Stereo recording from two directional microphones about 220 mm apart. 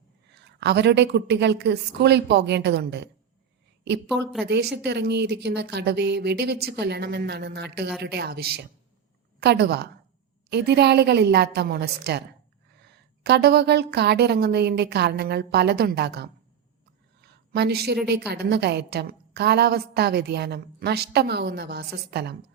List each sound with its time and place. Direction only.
0.3 s speech: 50° right (ahead or behind)
4.2 s a woman's voice: centre (ahead or behind)
4.4 s speech: 50° right (ahead or behind)
17.2 s a sound: 50° right (ahead or behind)
18.3 s speech: 50° right (ahead or behind)